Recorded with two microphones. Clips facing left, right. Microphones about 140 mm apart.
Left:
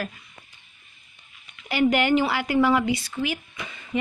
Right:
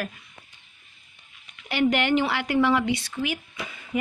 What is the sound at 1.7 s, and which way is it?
A woman's voice, 5° left (ahead or behind).